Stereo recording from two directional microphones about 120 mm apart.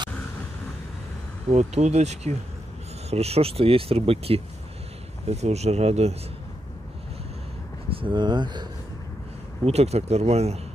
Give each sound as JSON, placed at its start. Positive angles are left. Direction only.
{"t": 1.5, "sound": "speech", "side_deg": -65}
{"t": 5.3, "sound": "speech", "side_deg": -65}
{"t": 7.9, "sound": "speech", "side_deg": -45}
{"t": 9.7, "sound": "speech", "side_deg": -60}